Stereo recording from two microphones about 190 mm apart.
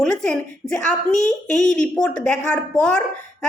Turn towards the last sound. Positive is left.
turn(degrees=5)  # may be behind; listen again after turning